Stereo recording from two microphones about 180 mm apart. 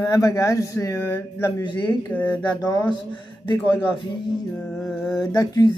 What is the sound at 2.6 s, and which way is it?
Speech, 20° left (ahead or behind).